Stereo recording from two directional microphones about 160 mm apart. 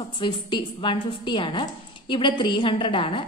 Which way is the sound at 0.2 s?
30° left (ahead or behind).